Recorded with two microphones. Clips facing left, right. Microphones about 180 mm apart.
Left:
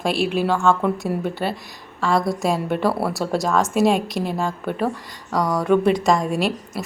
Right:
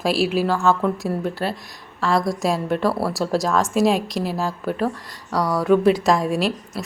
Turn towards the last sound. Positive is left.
turn(degrees=0)  # may be behind; listen again after turning